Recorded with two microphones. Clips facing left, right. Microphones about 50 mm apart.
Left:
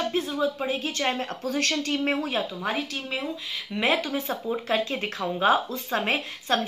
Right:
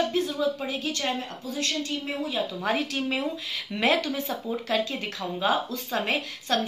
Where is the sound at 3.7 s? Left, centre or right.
Centre.